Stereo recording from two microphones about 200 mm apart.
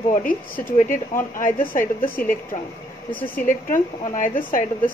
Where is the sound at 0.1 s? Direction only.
45° left (ahead or behind).